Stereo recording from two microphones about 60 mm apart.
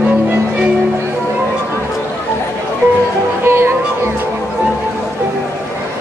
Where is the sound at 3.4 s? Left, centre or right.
Right.